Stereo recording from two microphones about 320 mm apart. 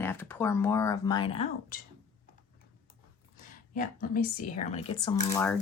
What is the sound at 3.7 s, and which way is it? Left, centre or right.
Speech, left.